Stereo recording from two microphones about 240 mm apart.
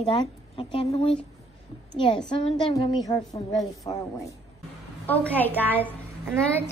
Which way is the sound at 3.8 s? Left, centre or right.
Centre.